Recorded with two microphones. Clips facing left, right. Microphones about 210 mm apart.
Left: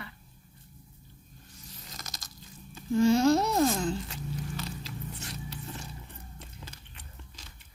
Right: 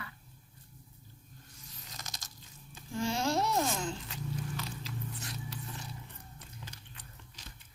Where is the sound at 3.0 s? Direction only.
40° left (ahead or behind).